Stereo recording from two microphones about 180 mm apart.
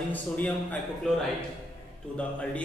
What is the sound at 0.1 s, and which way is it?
A man's voice, 10° left (ahead or behind).